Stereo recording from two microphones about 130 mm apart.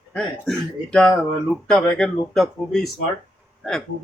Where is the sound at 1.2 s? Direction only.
Centre (ahead or behind).